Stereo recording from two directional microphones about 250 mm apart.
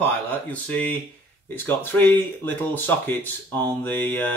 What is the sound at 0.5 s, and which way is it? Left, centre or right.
Speech, centre.